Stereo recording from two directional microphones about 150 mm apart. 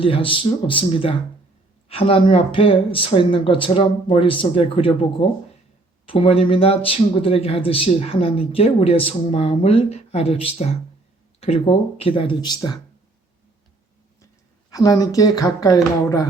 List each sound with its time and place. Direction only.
0.0 s speech: 35° left (ahead or behind)
14.7 s speech: 25° left (ahead or behind)